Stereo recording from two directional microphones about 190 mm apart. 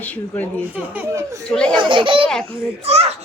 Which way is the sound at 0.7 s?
10° right (ahead or behind).